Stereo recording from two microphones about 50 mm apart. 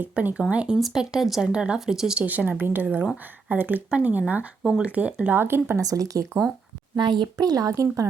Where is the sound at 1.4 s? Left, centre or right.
Centre.